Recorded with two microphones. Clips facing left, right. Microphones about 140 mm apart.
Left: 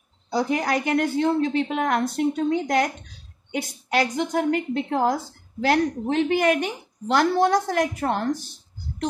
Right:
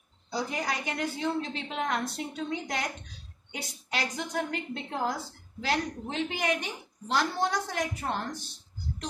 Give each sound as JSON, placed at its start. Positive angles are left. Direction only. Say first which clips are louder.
{"t": 0.3, "sound": "a woman's voice", "louder": "left 9 dB", "side_deg": 55}
{"t": 3.9, "sound": "a woman's voice", "louder": "left 10 dB", "side_deg": 55}
{"t": 7.5, "sound": "a woman's voice", "louder": "left 10 dB", "side_deg": 50}